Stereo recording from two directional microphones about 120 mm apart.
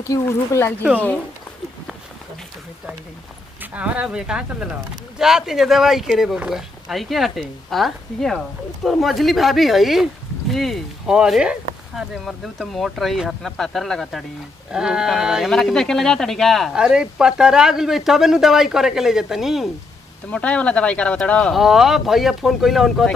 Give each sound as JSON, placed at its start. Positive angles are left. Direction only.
{"t": 0.0, "sound": "speech", "side_deg": 25}
{"t": 3.7, "sound": "speech", "side_deg": -10}
{"t": 20.2, "sound": "speech", "side_deg": 10}